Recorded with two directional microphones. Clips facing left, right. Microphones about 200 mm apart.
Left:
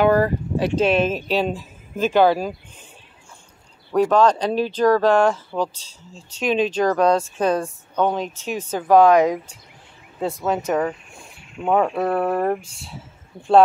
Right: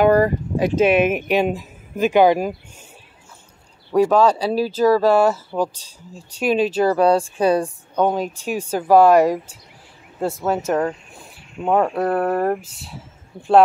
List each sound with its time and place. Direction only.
0.6 s speech: 50° right (ahead or behind)
0.8 s speech: 15° right (ahead or behind)
3.9 s speech: 10° right (ahead or behind)